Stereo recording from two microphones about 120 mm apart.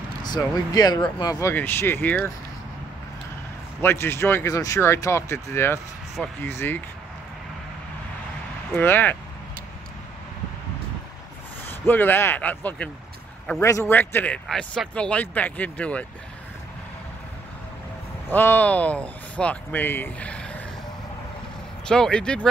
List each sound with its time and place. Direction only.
0.7 s speech: 35° left (ahead or behind)
1.4 s speech: 15° left (ahead or behind)
3.8 s speech: 20° left (ahead or behind)
8.7 s speech: 15° left (ahead or behind)
11.6 s speech: 15° left (ahead or behind)
13.6 s speech: 25° left (ahead or behind)
13.9 s speech: 15° left (ahead or behind)
18.3 s speech: 15° left (ahead or behind)
21.8 s speech: 5° left (ahead or behind)